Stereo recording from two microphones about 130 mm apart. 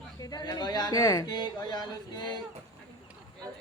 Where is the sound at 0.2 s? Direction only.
30° left (ahead or behind).